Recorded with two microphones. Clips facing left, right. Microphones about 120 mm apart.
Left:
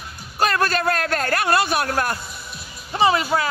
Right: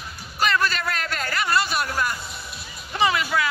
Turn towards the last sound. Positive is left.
turn(degrees=35)  # may be behind; listen again after turning